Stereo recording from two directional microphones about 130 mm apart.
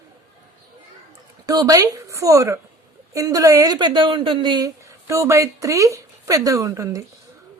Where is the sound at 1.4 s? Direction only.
30° right (ahead or behind).